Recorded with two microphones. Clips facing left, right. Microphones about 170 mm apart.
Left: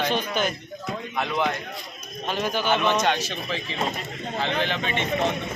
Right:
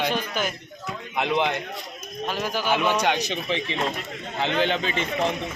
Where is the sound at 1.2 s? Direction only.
20° right (ahead or behind).